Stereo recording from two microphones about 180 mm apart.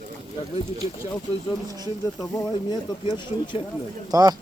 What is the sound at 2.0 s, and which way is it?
Speech, 20° left (ahead or behind).